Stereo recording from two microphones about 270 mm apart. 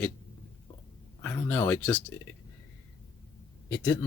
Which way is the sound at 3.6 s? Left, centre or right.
Centre.